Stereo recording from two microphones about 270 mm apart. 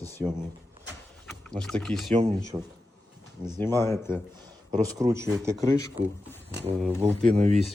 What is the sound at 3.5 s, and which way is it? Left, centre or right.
Speech, centre.